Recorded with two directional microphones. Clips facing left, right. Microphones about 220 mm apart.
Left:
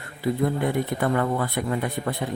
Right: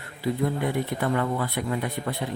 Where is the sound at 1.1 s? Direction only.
50° left (ahead or behind).